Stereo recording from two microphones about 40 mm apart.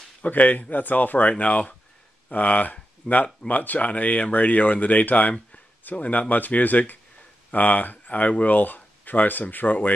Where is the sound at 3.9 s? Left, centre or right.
Left.